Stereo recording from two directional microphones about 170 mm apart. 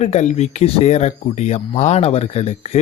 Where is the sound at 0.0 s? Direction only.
40° left (ahead or behind).